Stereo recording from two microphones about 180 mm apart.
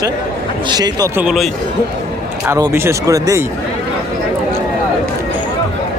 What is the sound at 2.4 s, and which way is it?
Speech, 15° right (ahead or behind).